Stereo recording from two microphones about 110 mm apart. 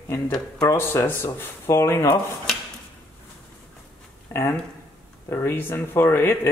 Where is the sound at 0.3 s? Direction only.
35° left (ahead or behind).